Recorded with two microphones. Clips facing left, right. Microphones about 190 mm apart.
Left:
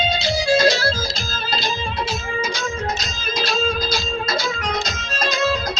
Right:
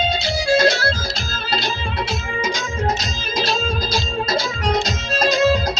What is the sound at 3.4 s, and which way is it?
Music, 35° right (ahead or behind).